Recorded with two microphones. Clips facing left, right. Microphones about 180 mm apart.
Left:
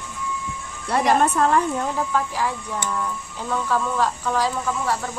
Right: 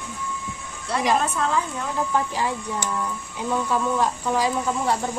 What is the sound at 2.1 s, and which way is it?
Speech, 20° right (ahead or behind).